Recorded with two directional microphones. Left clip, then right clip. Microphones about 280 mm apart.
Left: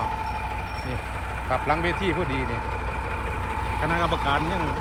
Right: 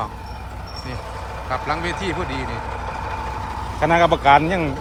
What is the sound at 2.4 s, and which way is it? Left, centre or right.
Vehicle, right.